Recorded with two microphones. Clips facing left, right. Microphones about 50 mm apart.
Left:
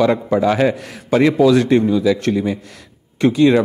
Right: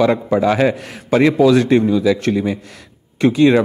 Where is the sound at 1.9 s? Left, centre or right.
Right.